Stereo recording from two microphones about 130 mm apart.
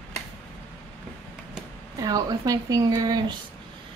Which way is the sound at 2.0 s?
30° right (ahead or behind).